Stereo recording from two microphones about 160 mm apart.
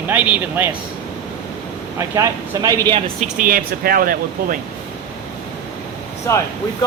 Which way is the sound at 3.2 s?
60° right (ahead or behind).